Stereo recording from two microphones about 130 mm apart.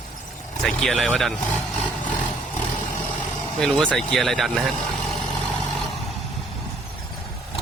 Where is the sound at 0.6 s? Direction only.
5° left (ahead or behind).